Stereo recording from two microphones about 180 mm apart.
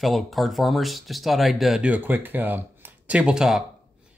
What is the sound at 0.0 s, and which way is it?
Speech, centre (ahead or behind).